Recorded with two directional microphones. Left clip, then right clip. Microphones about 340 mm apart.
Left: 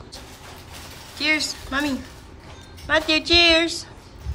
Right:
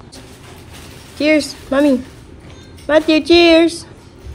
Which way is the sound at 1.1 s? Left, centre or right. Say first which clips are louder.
Right 7 dB; centre.